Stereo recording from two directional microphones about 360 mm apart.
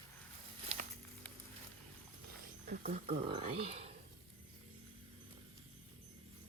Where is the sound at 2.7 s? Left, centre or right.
Right.